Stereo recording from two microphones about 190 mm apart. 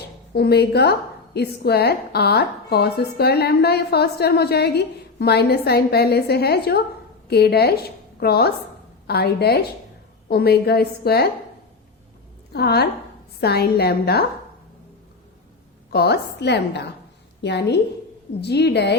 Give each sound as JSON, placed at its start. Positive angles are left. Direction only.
{"t": 0.0, "sound": "a woman's voice", "side_deg": 60}
{"t": 12.5, "sound": "a woman's voice", "side_deg": 60}
{"t": 15.9, "sound": "a woman's voice", "side_deg": 55}